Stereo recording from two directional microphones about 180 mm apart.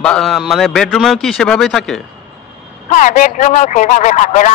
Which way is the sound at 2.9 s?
45° left (ahead or behind).